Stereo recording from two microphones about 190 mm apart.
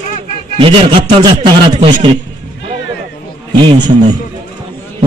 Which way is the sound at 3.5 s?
25° right (ahead or behind).